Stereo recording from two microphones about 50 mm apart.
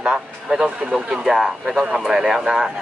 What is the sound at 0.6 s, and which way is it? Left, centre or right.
Speech, right.